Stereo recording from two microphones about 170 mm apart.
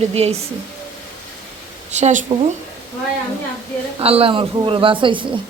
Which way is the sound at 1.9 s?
45° right (ahead or behind).